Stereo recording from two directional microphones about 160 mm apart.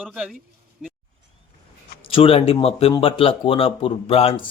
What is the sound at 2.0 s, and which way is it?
Speech, 35° left (ahead or behind).